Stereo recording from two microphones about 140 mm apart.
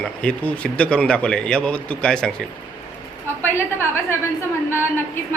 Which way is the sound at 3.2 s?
15° left (ahead or behind).